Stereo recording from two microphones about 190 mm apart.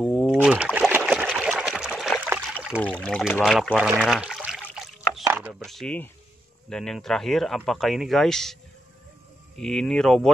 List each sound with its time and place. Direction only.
0.0 s a sound: centre (ahead or behind)
0.7 s trickle: 10° right (ahead or behind)
1.2 s water: centre (ahead or behind)
2.2 s trickle: 5° right (ahead or behind)
2.8 s speech: 5° left (ahead or behind)
5.2 s a sound: 10° right (ahead or behind)
6.7 s speech: 5° left (ahead or behind)
9.6 s speech: centre (ahead or behind)